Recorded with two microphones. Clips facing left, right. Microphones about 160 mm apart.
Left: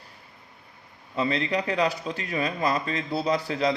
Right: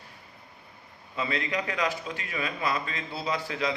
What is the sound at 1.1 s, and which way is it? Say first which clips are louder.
A man's voice: left 5 dB; 35° left (ahead or behind).